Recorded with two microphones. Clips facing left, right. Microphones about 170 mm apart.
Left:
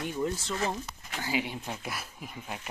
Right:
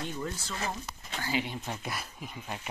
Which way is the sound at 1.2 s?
10° left (ahead or behind).